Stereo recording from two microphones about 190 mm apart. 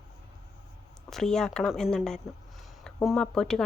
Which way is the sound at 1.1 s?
Centre (ahead or behind).